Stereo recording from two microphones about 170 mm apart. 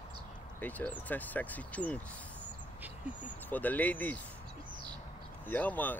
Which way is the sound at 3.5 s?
10° left (ahead or behind).